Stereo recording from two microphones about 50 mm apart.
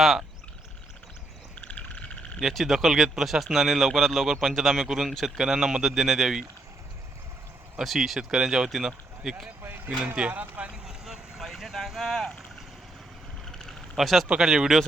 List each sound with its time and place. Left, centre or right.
1.5 s frog: left
2.5 s speech: centre
7.9 s speech: centre
9.6 s speech: right
10.2 s speech: right
10.7 s vehicle: centre
13.9 s speech: centre